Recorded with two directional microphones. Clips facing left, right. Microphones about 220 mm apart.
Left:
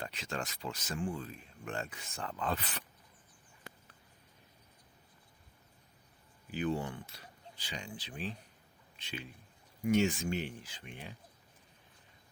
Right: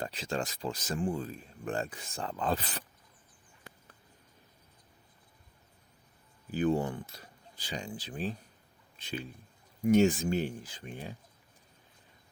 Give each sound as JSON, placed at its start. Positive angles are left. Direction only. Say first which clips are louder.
{"t": 0.0, "sound": "speech", "louder": "right 5 dB", "side_deg": -30}
{"t": 6.5, "sound": "speech", "louder": "right 6 dB", "side_deg": -40}